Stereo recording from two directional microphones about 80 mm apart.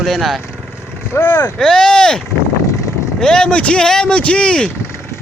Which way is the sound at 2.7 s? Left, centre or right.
Left.